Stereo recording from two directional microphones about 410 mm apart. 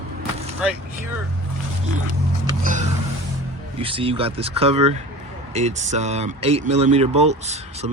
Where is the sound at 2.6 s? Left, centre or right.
Centre.